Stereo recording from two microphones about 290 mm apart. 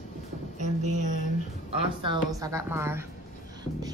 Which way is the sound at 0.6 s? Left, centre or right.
Right.